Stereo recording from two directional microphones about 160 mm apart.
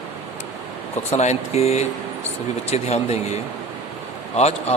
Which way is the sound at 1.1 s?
45° left (ahead or behind).